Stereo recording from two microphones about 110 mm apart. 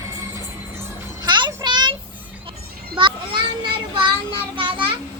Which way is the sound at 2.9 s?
50° right (ahead or behind).